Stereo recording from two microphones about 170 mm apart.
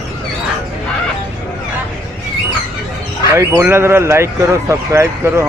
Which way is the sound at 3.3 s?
15° right (ahead or behind).